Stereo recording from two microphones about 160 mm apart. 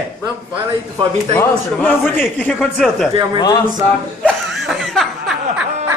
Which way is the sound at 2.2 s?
10° left (ahead or behind).